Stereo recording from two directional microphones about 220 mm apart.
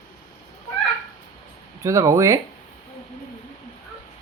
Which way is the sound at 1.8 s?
15° right (ahead or behind).